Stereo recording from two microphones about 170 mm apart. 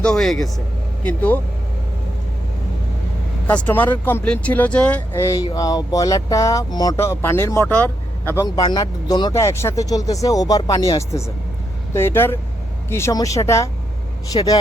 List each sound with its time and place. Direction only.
0.0 s speech: 5° left (ahead or behind)
3.4 s speech: 10° left (ahead or behind)